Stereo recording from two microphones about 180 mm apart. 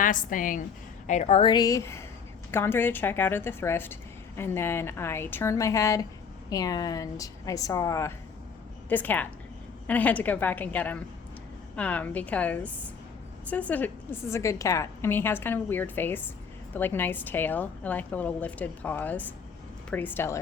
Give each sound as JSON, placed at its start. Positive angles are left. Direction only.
{"t": 0.0, "sound": "a woman's voice", "side_deg": 45}